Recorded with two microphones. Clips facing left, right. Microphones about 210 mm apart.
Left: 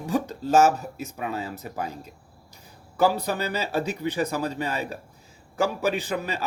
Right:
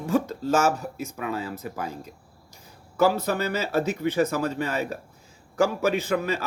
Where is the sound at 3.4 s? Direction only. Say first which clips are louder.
Right 3 dB; 15° left (ahead or behind).